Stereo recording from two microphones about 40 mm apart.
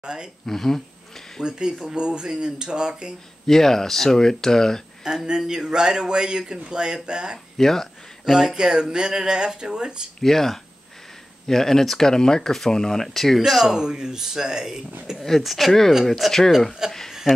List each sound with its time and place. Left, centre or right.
0.0 s speech: right
0.5 s speech: centre
1.4 s speech: centre
3.4 s speech: centre
5.0 s speech: centre
7.5 s speech: centre
8.3 s speech: centre
10.2 s speech: centre
13.7 s speech: centre
15.1 s speech: centre
16.8 s speech: centre